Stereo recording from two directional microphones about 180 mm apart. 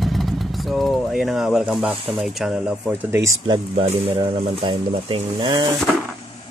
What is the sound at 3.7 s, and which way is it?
Speech, 30° right (ahead or behind).